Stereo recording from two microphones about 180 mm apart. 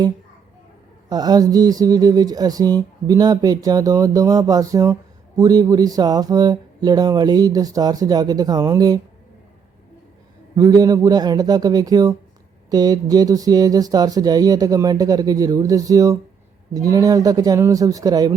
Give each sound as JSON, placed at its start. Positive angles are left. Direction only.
{"t": 1.1, "sound": "speech", "side_deg": -20}
{"t": 10.5, "sound": "speech", "side_deg": -20}